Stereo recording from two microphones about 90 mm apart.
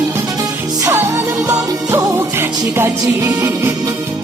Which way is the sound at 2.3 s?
25° right (ahead or behind).